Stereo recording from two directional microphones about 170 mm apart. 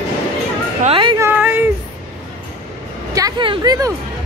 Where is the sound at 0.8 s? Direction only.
30° right (ahead or behind).